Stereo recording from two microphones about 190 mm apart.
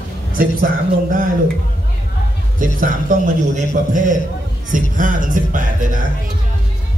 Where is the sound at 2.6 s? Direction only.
45° right (ahead or behind).